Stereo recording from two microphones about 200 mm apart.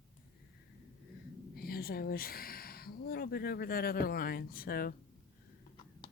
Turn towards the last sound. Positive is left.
turn(degrees=45)  # may be behind; listen again after turning